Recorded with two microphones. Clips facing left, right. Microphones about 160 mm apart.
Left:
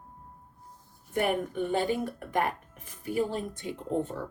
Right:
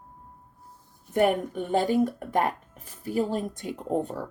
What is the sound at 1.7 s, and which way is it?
Speech, 40° right (ahead or behind).